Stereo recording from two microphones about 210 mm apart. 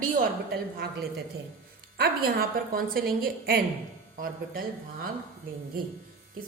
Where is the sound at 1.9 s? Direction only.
45° right (ahead or behind).